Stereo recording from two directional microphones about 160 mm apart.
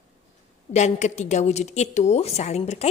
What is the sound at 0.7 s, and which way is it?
A woman's voice, 45° left (ahead or behind).